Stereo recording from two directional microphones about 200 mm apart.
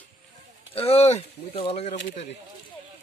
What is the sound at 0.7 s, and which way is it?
Speech, 30° left (ahead or behind).